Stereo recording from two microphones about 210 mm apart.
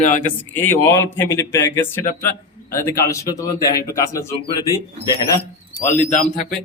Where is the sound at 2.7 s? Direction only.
10° left (ahead or behind).